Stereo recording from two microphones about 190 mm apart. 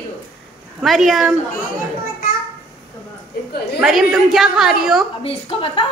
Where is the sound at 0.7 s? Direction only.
Centre (ahead or behind).